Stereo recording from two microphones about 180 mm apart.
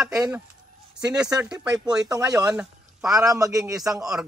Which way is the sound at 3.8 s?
Centre (ahead or behind).